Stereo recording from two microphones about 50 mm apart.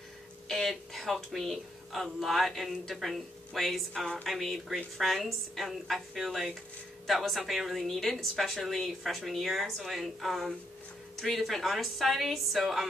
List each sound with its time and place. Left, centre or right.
0.5 s speech: centre